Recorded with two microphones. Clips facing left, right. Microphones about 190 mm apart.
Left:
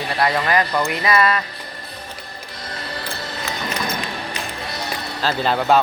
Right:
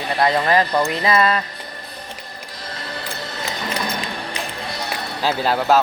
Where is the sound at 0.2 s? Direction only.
25° right (ahead or behind).